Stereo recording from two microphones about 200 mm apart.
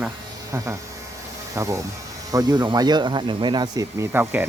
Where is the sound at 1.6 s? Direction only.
15° right (ahead or behind).